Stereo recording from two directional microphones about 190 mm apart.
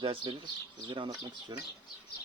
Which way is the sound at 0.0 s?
25° right (ahead or behind).